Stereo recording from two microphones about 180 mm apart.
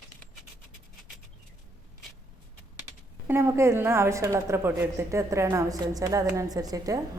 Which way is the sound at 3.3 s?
15° right (ahead or behind).